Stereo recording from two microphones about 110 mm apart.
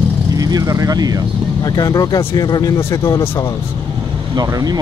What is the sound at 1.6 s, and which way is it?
Speech, 35° left (ahead or behind).